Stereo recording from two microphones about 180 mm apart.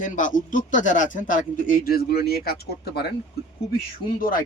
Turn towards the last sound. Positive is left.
turn(degrees=50)  # may be behind; listen again after turning